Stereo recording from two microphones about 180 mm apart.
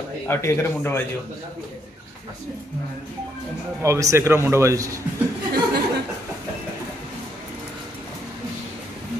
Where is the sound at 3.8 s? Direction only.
15° right (ahead or behind).